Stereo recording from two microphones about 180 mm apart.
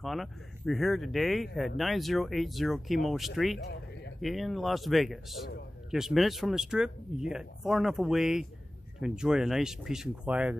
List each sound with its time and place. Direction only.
0.0 s a man's voice: centre (ahead or behind)
3.5 s a sound: 70° left (ahead or behind)
4.2 s a man's voice: centre (ahead or behind)